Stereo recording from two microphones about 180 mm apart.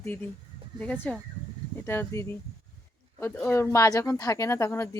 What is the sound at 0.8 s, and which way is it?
Speech, 10° left (ahead or behind).